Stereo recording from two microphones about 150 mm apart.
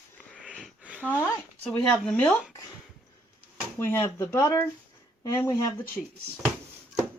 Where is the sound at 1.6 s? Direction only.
5° left (ahead or behind).